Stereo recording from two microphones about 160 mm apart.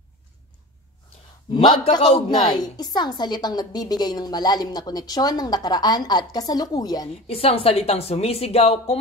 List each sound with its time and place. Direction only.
1.5 s a woman's voice: 30° left (ahead or behind)
2.5 s a woman's voice: 25° left (ahead or behind)
7.2 s a woman's voice: 40° left (ahead or behind)